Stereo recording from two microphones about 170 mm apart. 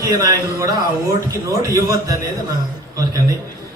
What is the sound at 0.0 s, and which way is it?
A man's voice, 20° right (ahead or behind).